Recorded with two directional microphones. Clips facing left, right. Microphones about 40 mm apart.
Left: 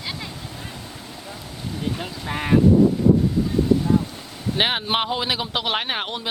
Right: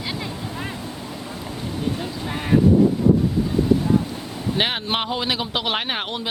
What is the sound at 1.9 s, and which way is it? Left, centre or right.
Speech, centre.